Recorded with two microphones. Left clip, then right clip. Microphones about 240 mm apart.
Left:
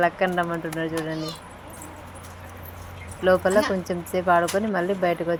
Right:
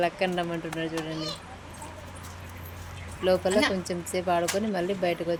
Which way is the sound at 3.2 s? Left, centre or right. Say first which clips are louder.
Left 4 dB; centre.